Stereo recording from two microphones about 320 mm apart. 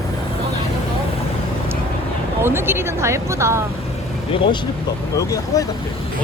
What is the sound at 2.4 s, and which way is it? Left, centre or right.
Speech, centre.